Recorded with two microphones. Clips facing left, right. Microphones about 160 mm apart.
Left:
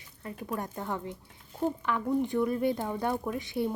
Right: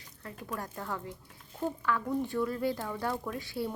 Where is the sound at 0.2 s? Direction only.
20° left (ahead or behind).